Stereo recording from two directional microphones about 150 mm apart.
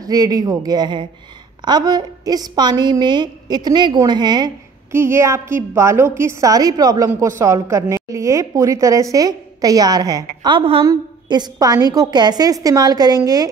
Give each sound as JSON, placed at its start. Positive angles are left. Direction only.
{"t": 0.0, "sound": "a woman's voice", "side_deg": -25}
{"t": 4.9, "sound": "a woman's voice", "side_deg": -15}